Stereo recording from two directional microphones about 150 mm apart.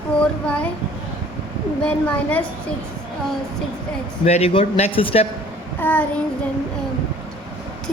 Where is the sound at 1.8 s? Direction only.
10° left (ahead or behind).